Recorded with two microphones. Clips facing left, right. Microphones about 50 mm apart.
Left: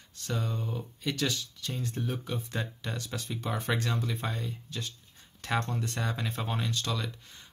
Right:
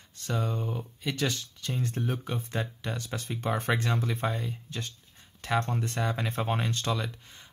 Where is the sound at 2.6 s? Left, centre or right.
Centre.